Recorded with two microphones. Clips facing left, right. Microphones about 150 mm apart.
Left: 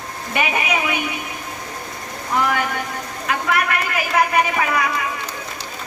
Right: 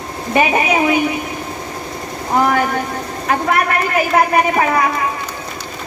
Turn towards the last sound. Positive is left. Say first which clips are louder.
# right 5 dB
turn(degrees=-35)  # may be behind; listen again after turning